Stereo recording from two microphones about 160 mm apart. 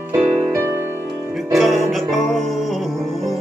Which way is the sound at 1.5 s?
Centre (ahead or behind).